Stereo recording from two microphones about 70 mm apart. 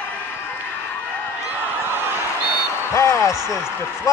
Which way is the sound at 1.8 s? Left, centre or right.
Right.